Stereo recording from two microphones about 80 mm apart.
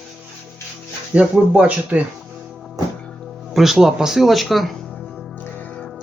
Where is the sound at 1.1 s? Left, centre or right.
Centre.